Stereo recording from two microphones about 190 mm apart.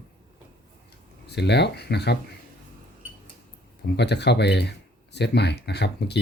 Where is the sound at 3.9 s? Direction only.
60° left (ahead or behind).